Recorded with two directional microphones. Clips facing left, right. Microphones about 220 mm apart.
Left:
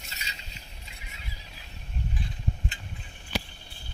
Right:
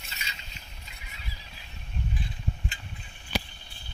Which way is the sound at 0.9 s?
30° left (ahead or behind).